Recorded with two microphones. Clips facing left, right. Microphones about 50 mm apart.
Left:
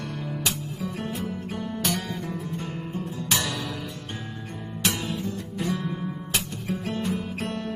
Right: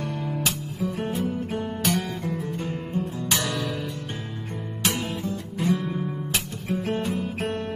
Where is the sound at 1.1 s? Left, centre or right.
Right.